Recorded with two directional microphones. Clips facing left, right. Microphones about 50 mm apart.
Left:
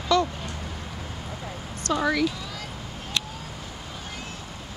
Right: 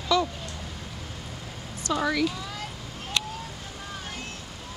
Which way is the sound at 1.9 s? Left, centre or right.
Centre.